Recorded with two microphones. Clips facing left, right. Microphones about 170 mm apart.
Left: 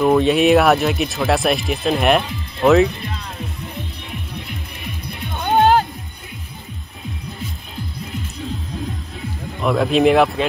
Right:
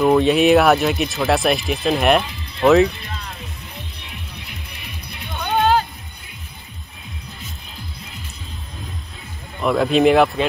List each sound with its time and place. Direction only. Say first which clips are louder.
0.0 s speech: even; centre (ahead or behind)
4.1 s music: left 6 dB; 50° left (ahead or behind)
9.6 s speech: even; centre (ahead or behind)